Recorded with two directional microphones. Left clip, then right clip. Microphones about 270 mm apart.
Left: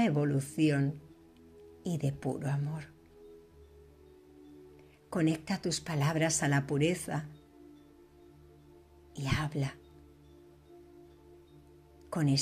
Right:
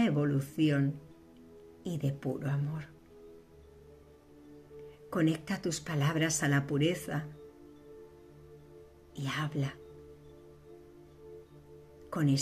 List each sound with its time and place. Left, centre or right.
0.0 s speech: centre
5.1 s speech: left
9.1 s speech: left
12.1 s speech: left